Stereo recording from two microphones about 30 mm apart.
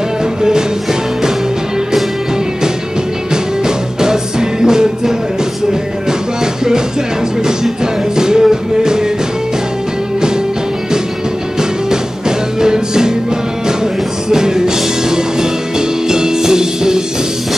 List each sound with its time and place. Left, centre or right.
0.4 s music: right
3.6 s music: right
7.8 s music: right
11.9 s music: right
14.3 s music: right